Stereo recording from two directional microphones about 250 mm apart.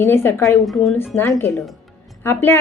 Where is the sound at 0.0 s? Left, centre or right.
Centre.